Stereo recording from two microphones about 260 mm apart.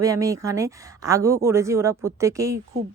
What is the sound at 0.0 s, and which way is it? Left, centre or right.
Speech, centre.